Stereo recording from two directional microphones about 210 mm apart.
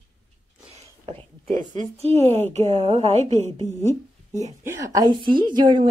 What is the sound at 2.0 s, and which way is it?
A woman's voice, 30° right (ahead or behind).